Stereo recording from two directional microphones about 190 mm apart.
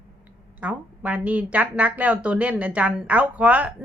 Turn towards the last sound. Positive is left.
turn(degrees=-5)  # may be behind; listen again after turning